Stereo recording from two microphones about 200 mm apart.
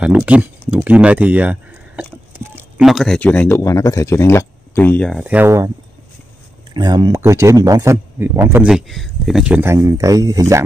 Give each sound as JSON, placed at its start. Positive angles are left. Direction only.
{"t": 0.0, "sound": "speech", "side_deg": -5}
{"t": 5.2, "sound": "speech", "side_deg": -10}
{"t": 6.7, "sound": "speech", "side_deg": -20}
{"t": 8.6, "sound": "speech", "side_deg": 0}